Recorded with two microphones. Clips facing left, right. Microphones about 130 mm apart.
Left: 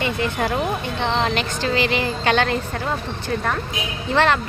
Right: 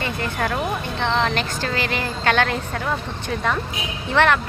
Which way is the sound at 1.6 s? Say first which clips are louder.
Left 4 dB; 50° right (ahead or behind).